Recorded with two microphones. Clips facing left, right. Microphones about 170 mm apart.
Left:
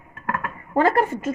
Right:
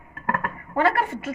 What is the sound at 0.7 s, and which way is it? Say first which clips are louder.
Speech: left 3 dB; 40° left (ahead or behind).